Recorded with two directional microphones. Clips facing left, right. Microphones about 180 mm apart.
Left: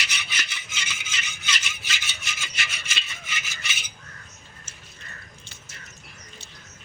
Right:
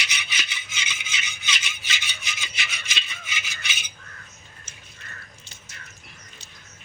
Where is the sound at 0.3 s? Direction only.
5° right (ahead or behind).